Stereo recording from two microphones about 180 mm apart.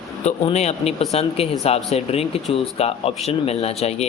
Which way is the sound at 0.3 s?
35° left (ahead or behind).